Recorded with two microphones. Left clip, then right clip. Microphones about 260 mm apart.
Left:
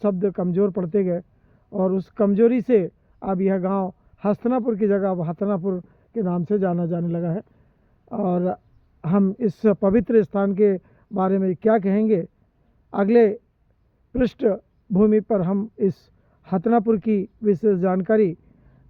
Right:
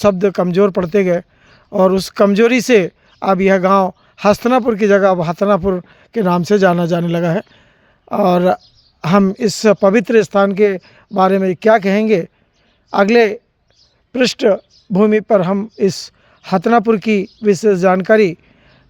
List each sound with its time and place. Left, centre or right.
0.0 s speech: centre